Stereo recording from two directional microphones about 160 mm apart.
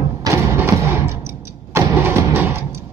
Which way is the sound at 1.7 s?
15° right (ahead or behind).